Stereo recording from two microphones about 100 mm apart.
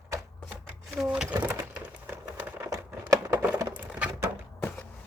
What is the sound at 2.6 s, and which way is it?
Crumpling, 30° right (ahead or behind).